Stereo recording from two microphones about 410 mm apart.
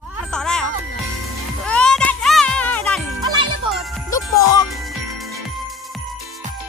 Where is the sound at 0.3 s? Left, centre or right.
Centre.